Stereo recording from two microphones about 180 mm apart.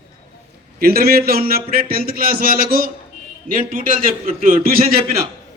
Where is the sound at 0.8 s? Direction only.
55° right (ahead or behind).